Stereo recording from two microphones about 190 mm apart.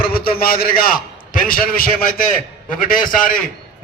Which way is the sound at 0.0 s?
50° left (ahead or behind).